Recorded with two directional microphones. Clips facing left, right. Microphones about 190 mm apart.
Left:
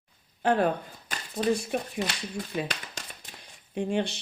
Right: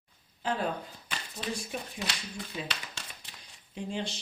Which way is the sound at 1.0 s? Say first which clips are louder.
Left 12 dB; 45° left (ahead or behind).